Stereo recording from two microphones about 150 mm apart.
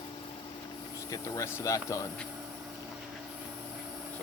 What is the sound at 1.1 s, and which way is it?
Speech, 20° left (ahead or behind).